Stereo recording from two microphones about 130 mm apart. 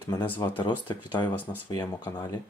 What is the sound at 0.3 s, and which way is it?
Speech, 35° left (ahead or behind).